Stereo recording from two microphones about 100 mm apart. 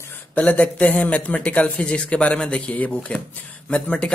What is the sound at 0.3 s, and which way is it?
Speech, 15° left (ahead or behind).